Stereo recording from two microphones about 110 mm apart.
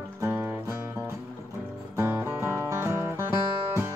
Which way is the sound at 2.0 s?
20° right (ahead or behind).